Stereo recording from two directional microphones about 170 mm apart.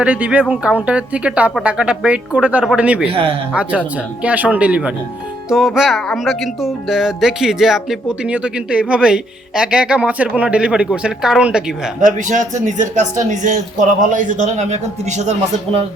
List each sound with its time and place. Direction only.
0.0 s speech: 10° right (ahead or behind)
11.9 s speech: 45° right (ahead or behind)